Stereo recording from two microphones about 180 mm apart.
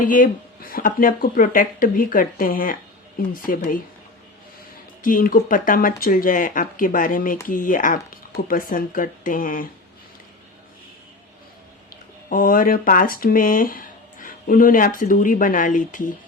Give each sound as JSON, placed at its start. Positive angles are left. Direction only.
{"t": 0.0, "sound": "speech", "side_deg": 50}
{"t": 5.0, "sound": "speech", "side_deg": 50}
{"t": 12.3, "sound": "speech", "side_deg": 50}